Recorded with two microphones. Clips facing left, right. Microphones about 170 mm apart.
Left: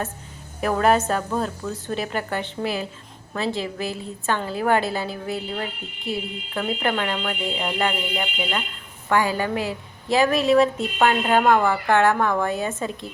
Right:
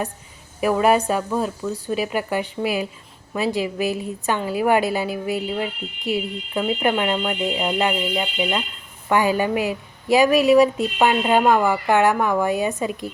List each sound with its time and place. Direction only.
0.6 s a woman's voice: 10° right (ahead or behind)